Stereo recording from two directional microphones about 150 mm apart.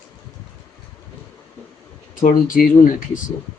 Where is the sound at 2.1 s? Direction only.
65° left (ahead or behind).